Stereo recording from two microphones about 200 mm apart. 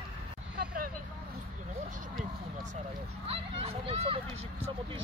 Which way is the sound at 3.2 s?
30° right (ahead or behind).